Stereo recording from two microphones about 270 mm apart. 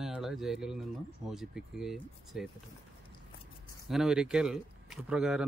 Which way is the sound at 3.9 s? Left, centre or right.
Centre.